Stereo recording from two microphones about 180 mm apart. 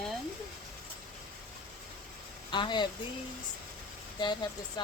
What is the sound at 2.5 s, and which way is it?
Speech, 25° left (ahead or behind).